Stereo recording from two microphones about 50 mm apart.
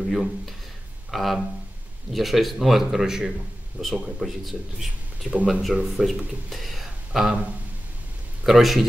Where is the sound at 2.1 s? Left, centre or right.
Centre.